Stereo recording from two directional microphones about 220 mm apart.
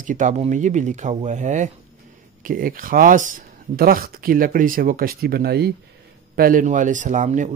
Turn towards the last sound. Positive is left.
turn(degrees=-35)  # may be behind; listen again after turning